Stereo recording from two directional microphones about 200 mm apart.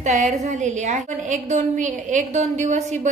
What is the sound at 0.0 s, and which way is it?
A woman's voice, 35° right (ahead or behind).